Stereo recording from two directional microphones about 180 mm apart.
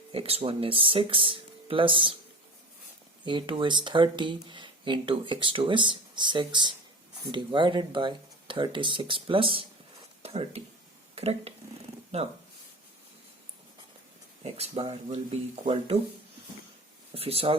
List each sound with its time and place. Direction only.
0.1 s speech: 35° right (ahead or behind)
3.2 s speech: 25° right (ahead or behind)
14.4 s speech: 35° right (ahead or behind)
17.2 s speech: 30° right (ahead or behind)